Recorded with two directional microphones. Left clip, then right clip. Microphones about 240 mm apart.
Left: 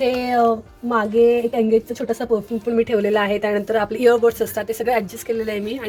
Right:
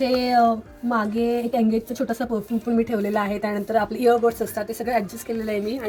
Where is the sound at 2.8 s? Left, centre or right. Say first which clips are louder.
Left 7 dB; left.